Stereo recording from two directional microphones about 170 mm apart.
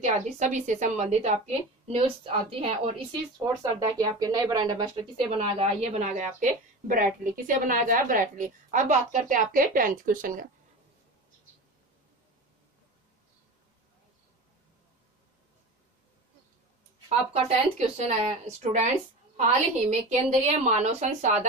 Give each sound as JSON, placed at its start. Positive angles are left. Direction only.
{"t": 0.0, "sound": "a woman's voice", "side_deg": -45}
{"t": 4.0, "sound": "a woman's voice", "side_deg": -20}
{"t": 17.3, "sound": "a woman's voice", "side_deg": -40}